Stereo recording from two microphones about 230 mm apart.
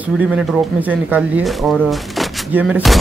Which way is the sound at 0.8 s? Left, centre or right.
Centre.